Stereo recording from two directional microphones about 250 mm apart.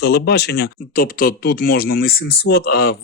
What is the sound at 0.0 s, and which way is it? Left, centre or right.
Speech, left.